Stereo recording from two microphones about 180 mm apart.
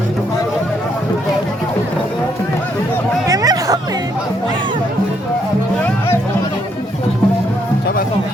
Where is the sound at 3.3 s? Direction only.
20° right (ahead or behind).